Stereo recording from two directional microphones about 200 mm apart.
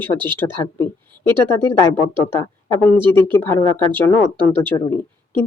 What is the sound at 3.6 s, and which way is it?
Speech, 25° left (ahead or behind).